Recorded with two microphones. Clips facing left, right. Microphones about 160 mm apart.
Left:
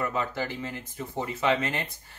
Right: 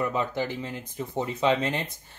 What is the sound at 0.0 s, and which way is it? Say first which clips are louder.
Speech: right 2 dB; 20° right (ahead or behind).